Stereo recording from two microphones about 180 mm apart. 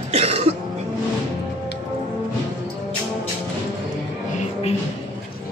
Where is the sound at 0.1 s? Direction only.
35° right (ahead or behind).